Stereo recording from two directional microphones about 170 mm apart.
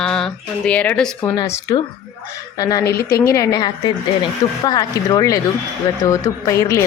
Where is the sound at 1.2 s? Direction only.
25° left (ahead or behind).